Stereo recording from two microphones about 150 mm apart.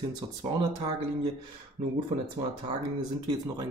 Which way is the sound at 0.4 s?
30° right (ahead or behind).